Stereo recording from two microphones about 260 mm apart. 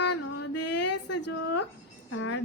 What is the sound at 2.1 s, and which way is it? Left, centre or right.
Speech, left.